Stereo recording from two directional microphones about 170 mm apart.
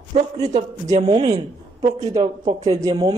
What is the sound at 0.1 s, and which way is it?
A man's voice, 40° right (ahead or behind).